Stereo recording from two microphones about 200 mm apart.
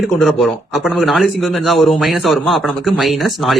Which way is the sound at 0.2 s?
Centre (ahead or behind).